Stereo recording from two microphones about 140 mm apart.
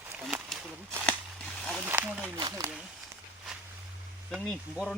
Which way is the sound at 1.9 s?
10° right (ahead or behind).